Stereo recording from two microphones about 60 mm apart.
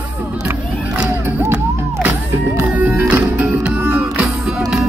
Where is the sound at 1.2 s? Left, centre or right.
Right.